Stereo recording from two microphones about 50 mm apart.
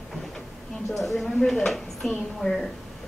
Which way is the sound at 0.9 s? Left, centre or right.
Centre.